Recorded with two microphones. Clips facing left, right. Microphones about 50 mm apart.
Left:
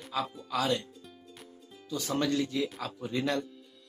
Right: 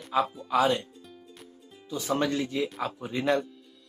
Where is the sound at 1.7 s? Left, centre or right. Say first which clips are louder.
Right 4 dB; centre.